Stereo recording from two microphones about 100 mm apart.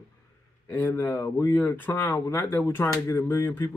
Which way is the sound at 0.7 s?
20° left (ahead or behind).